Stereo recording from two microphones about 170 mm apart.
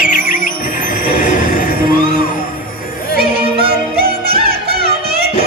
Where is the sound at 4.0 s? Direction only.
65° right (ahead or behind).